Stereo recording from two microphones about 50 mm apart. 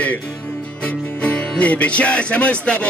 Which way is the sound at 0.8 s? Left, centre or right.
Left.